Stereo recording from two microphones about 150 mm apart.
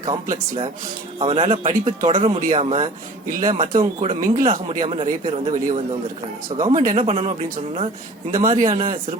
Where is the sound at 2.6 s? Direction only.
45° right (ahead or behind); by 3.8 s 60° right (ahead or behind).